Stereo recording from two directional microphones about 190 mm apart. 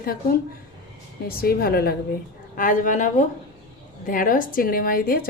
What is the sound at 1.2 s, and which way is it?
Speech, 50° left (ahead or behind).